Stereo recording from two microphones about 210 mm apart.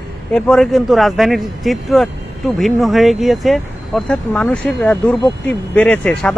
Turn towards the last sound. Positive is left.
turn(degrees=5)  # may be behind; listen again after turning